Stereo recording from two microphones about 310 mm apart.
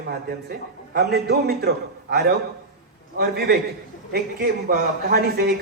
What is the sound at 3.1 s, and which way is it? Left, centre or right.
A woman's voice, right.